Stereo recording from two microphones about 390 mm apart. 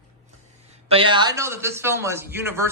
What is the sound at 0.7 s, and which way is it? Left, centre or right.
A man's voice, centre.